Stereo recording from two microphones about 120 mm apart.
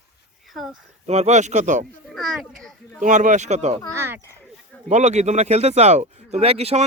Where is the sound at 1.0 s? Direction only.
65° right (ahead or behind); by 1.8 s 85° right.